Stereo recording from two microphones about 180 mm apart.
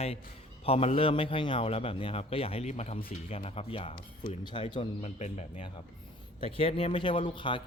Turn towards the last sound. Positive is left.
turn(degrees=25)  # may be behind; listen again after turning